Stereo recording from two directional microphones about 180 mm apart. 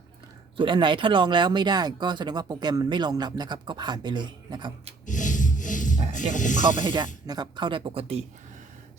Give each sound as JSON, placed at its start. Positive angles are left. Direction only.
{"t": 0.5, "sound": "speech", "side_deg": -25}
{"t": 5.0, "sound": "a sound", "side_deg": 45}
{"t": 6.1, "sound": "speech", "side_deg": 45}
{"t": 6.8, "sound": "speech", "side_deg": -25}